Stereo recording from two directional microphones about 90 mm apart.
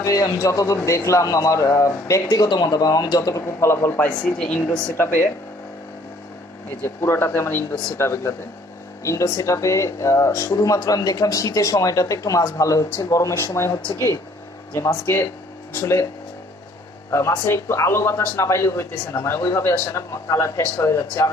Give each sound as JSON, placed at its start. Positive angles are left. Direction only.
{"t": 0.0, "sound": "speech", "side_deg": 40}
{"t": 3.4, "sound": "speech", "side_deg": 30}
{"t": 4.2, "sound": "speech", "side_deg": 10}
{"t": 4.6, "sound": "speech", "side_deg": 25}
{"t": 6.8, "sound": "speech", "side_deg": 25}
{"t": 14.9, "sound": "speech", "side_deg": 25}
{"t": 17.5, "sound": "speech", "side_deg": 30}